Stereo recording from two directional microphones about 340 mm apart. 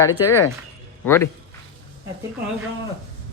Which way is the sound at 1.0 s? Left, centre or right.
Centre.